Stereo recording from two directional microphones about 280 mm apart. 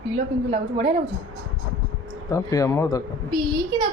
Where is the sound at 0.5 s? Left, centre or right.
Right.